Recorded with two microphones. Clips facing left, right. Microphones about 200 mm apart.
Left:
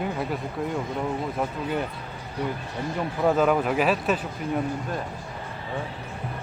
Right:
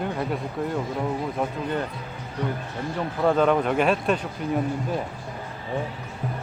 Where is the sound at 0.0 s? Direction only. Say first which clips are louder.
Right 1 dB; centre (ahead or behind).